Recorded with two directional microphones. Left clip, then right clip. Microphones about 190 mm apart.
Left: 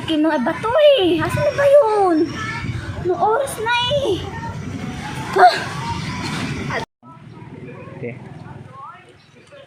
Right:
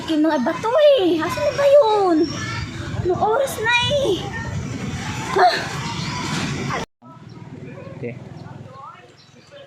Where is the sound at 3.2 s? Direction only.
Centre (ahead or behind).